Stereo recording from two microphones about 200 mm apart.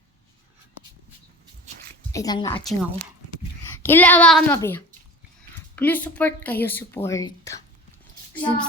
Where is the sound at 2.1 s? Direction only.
20° left (ahead or behind).